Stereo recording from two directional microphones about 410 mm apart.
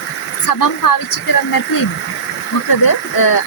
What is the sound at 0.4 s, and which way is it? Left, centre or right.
Speech, left.